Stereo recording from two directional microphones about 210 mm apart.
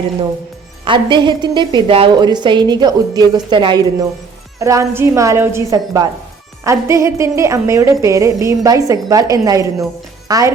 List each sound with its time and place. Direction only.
0.9 s a woman's voice: 20° right (ahead or behind)